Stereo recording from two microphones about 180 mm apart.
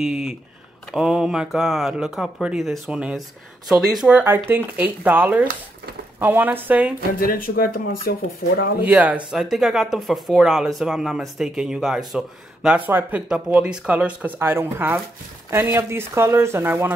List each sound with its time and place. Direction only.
0.0 s speech: centre (ahead or behind)
7.2 s speech: 55° left (ahead or behind)
8.8 s speech: 10° right (ahead or behind)